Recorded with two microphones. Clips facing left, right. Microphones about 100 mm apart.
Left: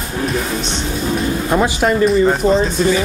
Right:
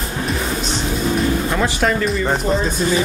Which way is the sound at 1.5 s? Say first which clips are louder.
Left 8 dB; 20° left (ahead or behind).